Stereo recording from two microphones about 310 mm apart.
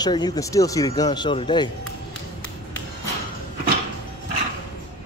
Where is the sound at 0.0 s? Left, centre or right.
Centre.